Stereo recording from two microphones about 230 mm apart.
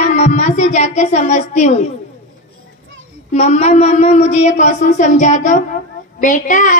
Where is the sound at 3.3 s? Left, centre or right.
Left.